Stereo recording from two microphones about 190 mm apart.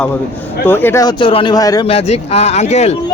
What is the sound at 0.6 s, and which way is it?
Speech, 10° left (ahead or behind).